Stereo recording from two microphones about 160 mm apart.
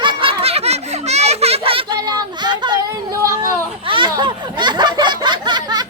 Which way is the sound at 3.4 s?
30° right (ahead or behind).